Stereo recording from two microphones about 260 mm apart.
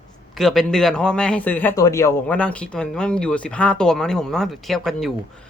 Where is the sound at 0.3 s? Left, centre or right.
Centre.